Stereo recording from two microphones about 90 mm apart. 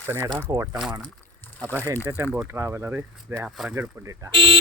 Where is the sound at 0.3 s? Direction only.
45° right (ahead or behind).